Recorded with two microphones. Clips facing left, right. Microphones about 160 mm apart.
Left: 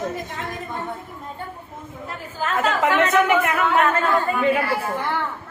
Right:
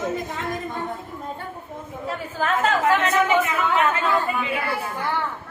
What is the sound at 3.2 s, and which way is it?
Speech, 60° left (ahead or behind).